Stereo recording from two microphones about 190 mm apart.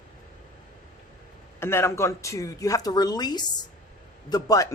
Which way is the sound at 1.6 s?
15° left (ahead or behind).